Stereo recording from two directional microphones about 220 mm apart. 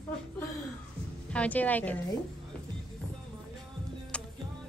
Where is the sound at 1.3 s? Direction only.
5° left (ahead or behind).